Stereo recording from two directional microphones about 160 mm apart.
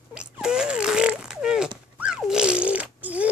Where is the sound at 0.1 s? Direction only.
5° right (ahead or behind).